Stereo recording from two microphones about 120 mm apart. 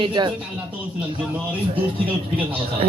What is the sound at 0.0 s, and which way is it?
Speech, 40° right (ahead or behind).